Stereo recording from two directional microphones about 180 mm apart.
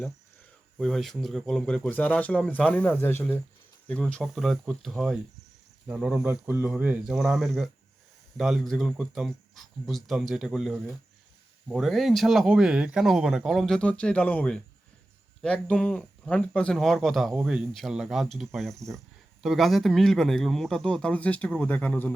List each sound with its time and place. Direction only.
0.8 s speech: centre (ahead or behind)